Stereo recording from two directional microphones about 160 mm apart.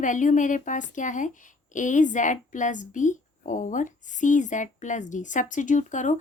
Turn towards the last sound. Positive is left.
turn(degrees=50)  # may be behind; listen again after turning